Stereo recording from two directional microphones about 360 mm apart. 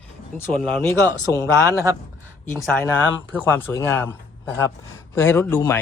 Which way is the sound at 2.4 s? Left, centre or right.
Centre.